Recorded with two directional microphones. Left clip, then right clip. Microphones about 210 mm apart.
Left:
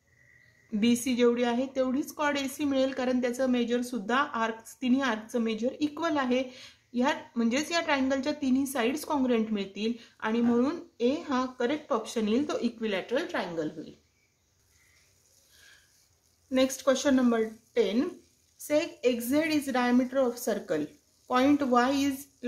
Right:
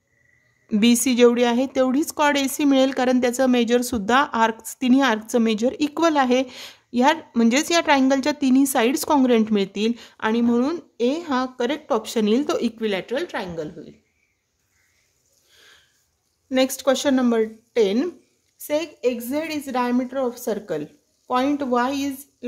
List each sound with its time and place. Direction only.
0.7 s speech: 50° right (ahead or behind)
16.4 s speech: 45° right (ahead or behind)
18.6 s a woman's voice: 30° right (ahead or behind)